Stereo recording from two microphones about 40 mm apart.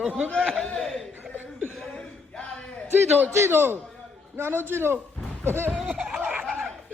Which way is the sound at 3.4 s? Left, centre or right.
Right.